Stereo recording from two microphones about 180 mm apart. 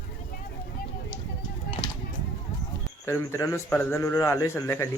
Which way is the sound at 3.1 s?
15° left (ahead or behind).